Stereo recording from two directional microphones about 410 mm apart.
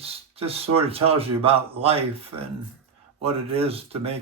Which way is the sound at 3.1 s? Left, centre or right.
Centre.